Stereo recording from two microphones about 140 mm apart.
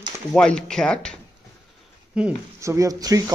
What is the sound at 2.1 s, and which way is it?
Speech, 5° right (ahead or behind).